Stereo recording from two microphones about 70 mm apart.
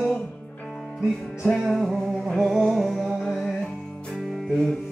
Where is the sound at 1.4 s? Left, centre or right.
Centre.